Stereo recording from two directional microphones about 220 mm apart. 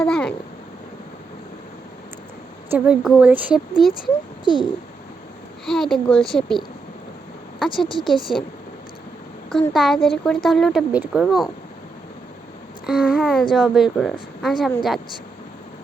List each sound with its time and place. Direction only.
0.0 s a sound: 5° left (ahead or behind)
2.6 s a woman's voice: 5° right (ahead or behind)
4.0 s a child's voice: 20° left (ahead or behind)
5.6 s a woman's voice: centre (ahead or behind)
9.7 s a woman's voice: centre (ahead or behind)
12.8 s a woman's voice: centre (ahead or behind)